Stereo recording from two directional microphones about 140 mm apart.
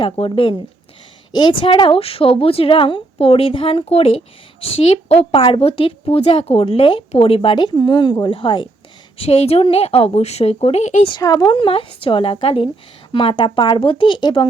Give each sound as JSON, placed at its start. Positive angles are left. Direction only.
{"t": 0.0, "sound": "a woman's voice", "side_deg": 40}
{"t": 11.1, "sound": "a woman's voice", "side_deg": 30}